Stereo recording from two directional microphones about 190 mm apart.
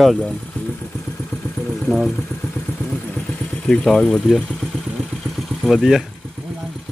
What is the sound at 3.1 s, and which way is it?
Vehicle, 5° left (ahead or behind).